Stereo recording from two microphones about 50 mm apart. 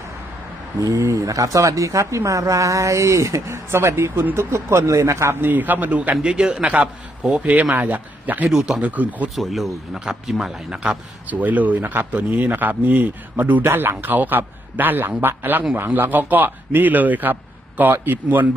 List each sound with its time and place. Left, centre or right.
0.8 s speech: right
4.1 s a man's voice: right
4.5 s speech: right
5.3 s speech: right
6.2 s a man's voice: centre; by 9.3 s right
9.3 s a man's voice: centre
11.3 s a man's voice: right